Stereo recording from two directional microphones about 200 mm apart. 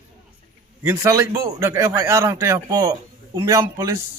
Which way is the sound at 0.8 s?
15° right (ahead or behind).